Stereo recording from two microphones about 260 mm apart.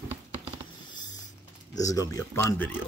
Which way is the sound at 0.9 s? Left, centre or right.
Centre.